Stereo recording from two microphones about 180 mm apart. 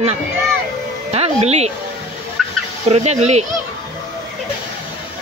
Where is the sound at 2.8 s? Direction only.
40° right (ahead or behind).